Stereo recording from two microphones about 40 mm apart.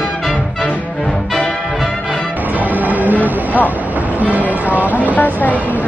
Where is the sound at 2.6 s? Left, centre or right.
Right.